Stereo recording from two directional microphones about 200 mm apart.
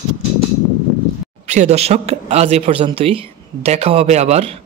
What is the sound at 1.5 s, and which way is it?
Speech, 35° right (ahead or behind).